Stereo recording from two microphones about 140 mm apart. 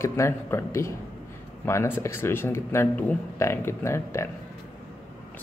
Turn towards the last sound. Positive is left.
turn(degrees=20)  # may be behind; listen again after turning